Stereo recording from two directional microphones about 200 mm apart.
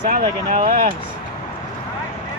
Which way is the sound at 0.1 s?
45° right (ahead or behind).